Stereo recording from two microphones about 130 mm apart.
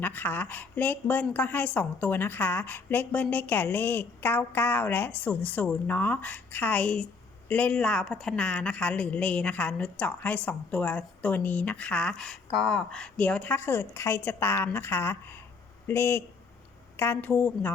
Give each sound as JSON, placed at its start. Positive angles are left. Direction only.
{"t": 0.0, "sound": "a woman's voice", "side_deg": 15}